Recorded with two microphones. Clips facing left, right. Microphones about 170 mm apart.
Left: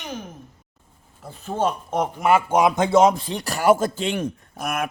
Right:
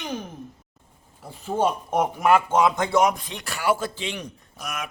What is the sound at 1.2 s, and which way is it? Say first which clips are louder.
A man's voice: even; 10° right (ahead or behind).